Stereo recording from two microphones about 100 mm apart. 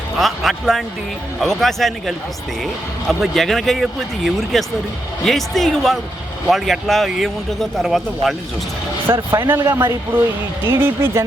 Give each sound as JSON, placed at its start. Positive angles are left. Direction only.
{"t": 0.2, "sound": "speech", "side_deg": 0}
{"t": 9.1, "sound": "speech", "side_deg": -45}
{"t": 9.5, "sound": "speech", "side_deg": -25}